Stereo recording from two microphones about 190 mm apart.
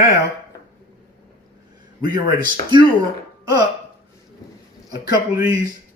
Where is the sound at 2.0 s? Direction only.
50° left (ahead or behind).